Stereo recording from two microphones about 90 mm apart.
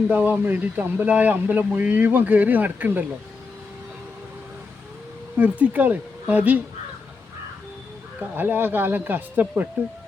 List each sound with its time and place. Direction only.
0.1 s speech: 20° right (ahead or behind)
5.4 s speech: 15° right (ahead or behind)
8.4 s speech: 20° right (ahead or behind)